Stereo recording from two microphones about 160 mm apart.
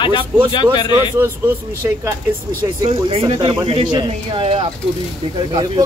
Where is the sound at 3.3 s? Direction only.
35° right (ahead or behind).